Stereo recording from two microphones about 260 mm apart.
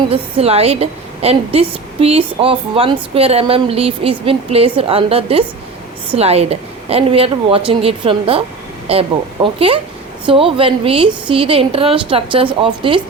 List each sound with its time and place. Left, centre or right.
0.1 s a woman's voice: right